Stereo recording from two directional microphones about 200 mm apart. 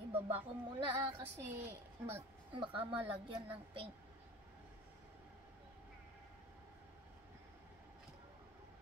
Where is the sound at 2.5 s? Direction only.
25° right (ahead or behind).